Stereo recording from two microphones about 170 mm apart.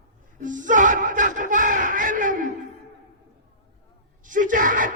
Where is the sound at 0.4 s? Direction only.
50° right (ahead or behind).